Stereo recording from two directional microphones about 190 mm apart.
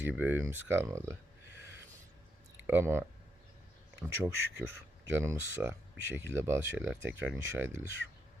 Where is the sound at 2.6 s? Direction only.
10° right (ahead or behind).